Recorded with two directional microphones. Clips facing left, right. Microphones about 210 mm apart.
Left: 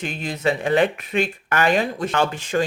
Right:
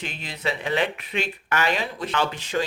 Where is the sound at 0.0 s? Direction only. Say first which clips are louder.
Left 7 dB; 50° left (ahead or behind).